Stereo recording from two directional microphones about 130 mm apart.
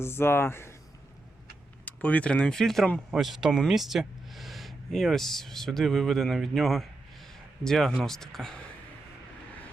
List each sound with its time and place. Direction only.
0.0 s speech: 20° left (ahead or behind)
1.8 s speech: 10° left (ahead or behind)